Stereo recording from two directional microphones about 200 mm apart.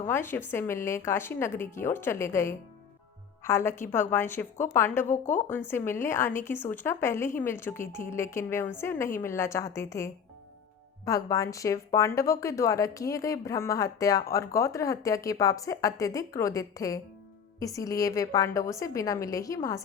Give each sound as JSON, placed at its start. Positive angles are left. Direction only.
{"t": 0.0, "sound": "speech", "side_deg": 10}
{"t": 5.0, "sound": "a woman's voice", "side_deg": 40}
{"t": 5.5, "sound": "speech", "side_deg": 10}